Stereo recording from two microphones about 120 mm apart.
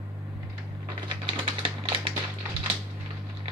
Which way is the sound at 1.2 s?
45° right (ahead or behind).